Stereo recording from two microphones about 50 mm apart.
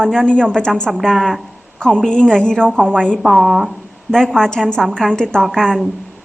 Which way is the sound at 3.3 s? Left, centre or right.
Centre.